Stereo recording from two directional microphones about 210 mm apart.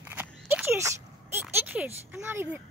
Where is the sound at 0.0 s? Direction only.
10° right (ahead or behind).